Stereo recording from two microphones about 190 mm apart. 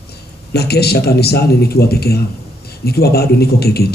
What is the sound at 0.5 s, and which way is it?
A man's voice, 55° left (ahead or behind).